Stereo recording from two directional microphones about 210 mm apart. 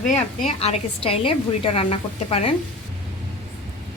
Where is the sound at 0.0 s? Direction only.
35° left (ahead or behind).